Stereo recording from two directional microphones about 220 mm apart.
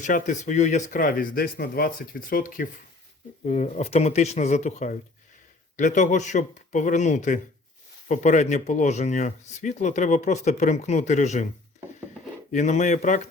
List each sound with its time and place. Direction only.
0.0 s speech: 35° left (ahead or behind)
12.5 s speech: 35° left (ahead or behind)